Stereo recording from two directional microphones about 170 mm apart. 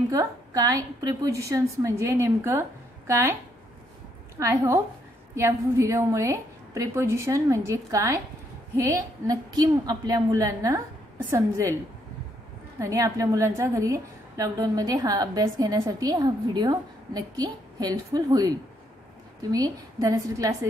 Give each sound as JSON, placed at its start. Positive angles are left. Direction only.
{"t": 0.1, "sound": "a woman's voice", "side_deg": -20}
{"t": 4.4, "sound": "a woman's voice", "side_deg": -15}
{"t": 12.7, "sound": "a woman's voice", "side_deg": -20}
{"t": 19.5, "sound": "a woman's voice", "side_deg": -20}